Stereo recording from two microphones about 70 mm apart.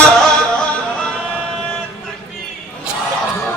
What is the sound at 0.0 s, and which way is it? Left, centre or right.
Music, centre.